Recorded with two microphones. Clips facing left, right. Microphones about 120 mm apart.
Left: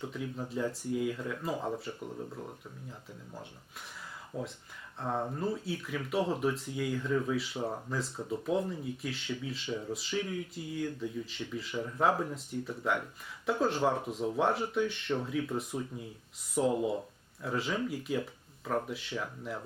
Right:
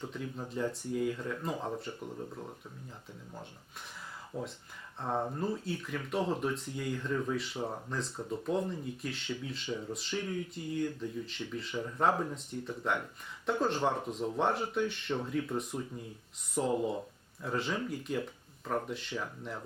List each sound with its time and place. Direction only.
0.0 s speech: centre (ahead or behind)
4.9 s speech: centre (ahead or behind)